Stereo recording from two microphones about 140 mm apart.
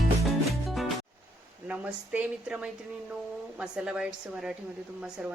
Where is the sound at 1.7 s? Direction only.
10° right (ahead or behind).